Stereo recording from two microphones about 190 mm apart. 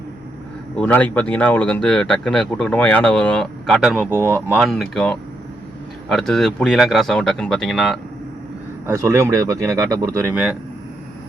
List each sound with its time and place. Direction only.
0.8 s speech: 10° left (ahead or behind)
8.9 s speech: 15° right (ahead or behind)